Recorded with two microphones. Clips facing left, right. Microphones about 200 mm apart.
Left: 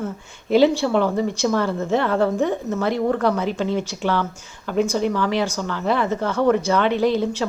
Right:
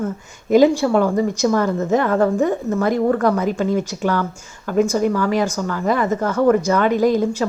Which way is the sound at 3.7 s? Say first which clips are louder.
Right 3 dB; 45° right (ahead or behind).